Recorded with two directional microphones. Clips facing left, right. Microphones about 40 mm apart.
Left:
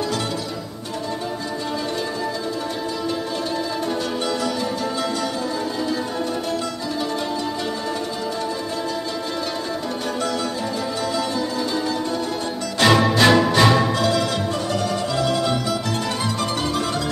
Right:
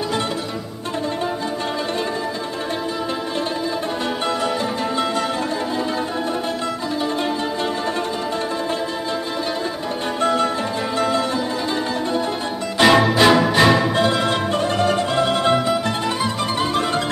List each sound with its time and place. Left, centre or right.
10.2 s music: right
12.7 s music: centre
13.9 s music: right